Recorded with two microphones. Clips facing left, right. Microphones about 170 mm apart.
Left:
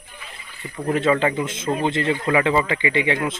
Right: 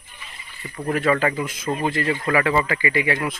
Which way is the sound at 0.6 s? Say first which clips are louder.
Left 1 dB; 25° left (ahead or behind).